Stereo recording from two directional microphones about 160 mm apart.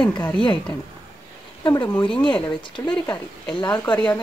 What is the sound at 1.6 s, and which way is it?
Speech, 30° left (ahead or behind).